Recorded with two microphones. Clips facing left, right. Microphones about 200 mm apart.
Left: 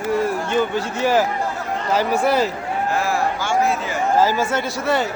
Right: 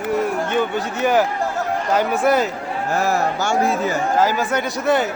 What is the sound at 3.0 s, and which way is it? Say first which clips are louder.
A man's voice: right 2 dB; 40° right (ahead or behind).